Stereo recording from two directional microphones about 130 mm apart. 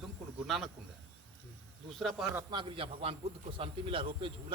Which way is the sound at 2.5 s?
45° right (ahead or behind).